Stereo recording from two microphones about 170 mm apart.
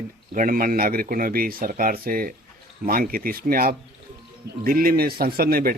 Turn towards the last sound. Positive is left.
turn(degrees=-60)  # may be behind; listen again after turning